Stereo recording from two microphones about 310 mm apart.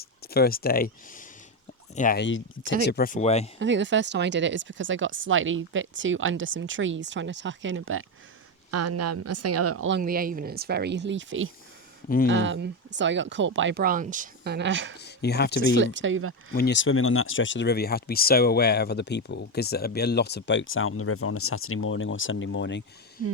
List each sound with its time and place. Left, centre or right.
0.0 s speech: left
3.6 s speech: right
8.7 s speech: right
10.0 s speech: right
12.0 s speech: left
12.3 s speech: right
14.9 s speech: left
15.8 s speech: right
16.6 s speech: left